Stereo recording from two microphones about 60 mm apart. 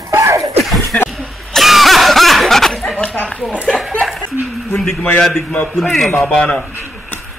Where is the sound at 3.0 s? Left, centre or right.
Left.